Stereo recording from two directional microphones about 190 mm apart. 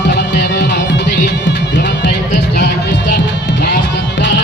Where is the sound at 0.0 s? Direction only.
60° left (ahead or behind).